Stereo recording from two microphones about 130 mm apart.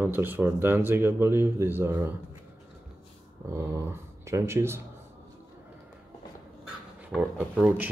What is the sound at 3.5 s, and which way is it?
Speech, 20° right (ahead or behind).